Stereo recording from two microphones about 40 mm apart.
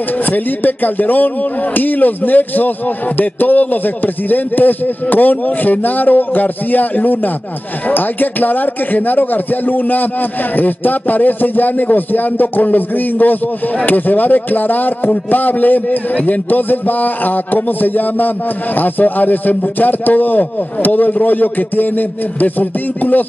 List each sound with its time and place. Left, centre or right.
0.3 s a man's voice: left